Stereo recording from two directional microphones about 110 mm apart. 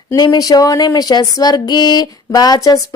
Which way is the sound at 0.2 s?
35° left (ahead or behind).